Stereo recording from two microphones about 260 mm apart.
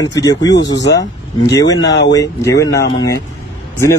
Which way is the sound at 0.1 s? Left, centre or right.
Centre.